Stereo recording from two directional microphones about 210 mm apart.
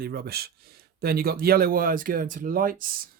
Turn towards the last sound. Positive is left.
turn(degrees=-40)  # may be behind; listen again after turning